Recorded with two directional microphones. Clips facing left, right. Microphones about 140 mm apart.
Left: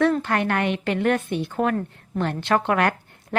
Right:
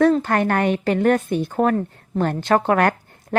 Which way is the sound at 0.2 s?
40° right (ahead or behind).